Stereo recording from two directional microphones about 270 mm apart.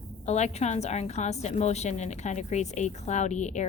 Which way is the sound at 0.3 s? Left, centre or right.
Left.